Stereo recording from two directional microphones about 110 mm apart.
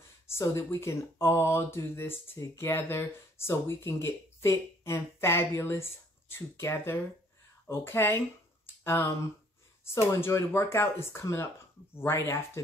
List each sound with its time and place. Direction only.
0.3 s speech: 25° left (ahead or behind)
10.1 s speech: 25° left (ahead or behind)